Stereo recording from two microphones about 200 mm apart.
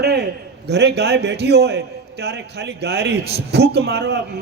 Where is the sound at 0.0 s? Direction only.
55° right (ahead or behind).